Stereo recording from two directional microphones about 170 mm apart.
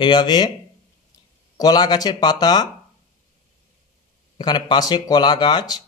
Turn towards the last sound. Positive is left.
turn(degrees=25)  # may be behind; listen again after turning